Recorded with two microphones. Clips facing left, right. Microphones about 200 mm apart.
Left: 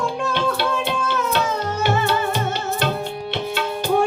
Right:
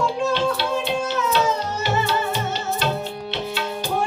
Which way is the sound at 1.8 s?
55° left (ahead or behind).